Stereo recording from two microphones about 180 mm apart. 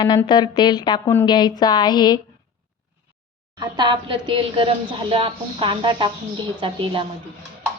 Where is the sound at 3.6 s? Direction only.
25° right (ahead or behind).